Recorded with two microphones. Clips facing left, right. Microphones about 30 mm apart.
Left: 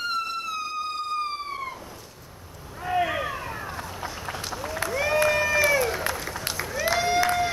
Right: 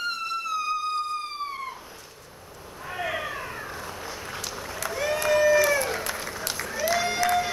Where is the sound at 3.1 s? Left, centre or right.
Centre.